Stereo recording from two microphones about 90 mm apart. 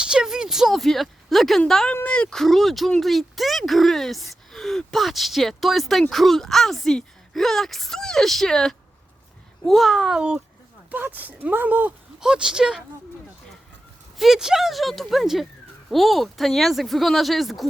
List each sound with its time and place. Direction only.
0.0 s speech: 10° right (ahead or behind)
12.2 s speech: 10° right (ahead or behind)
14.2 s speech: 5° right (ahead or behind)